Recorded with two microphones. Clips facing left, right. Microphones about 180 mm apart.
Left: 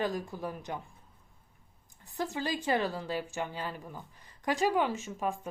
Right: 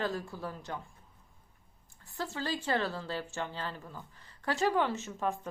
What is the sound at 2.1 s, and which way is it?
Speech, 15° left (ahead or behind).